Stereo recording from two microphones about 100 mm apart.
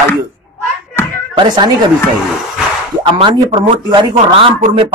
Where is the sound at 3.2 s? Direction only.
60° right (ahead or behind).